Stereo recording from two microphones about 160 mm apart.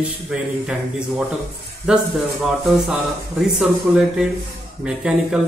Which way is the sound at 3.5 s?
5° right (ahead or behind).